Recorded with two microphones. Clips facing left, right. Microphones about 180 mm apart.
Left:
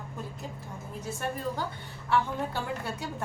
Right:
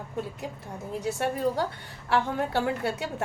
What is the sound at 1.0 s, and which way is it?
A woman's voice, 70° right (ahead or behind).